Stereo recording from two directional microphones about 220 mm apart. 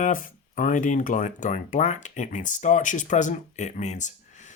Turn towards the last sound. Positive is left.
turn(degrees=35)  # may be behind; listen again after turning